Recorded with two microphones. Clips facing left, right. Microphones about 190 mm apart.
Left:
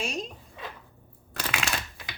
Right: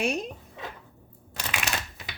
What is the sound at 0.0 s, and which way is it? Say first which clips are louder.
Speech: right 5 dB; 60° right (ahead or behind).